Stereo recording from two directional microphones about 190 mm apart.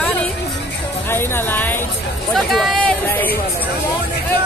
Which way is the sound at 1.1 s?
10° left (ahead or behind).